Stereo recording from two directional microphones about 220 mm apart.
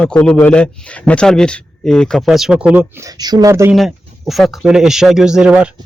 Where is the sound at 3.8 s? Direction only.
Centre (ahead or behind).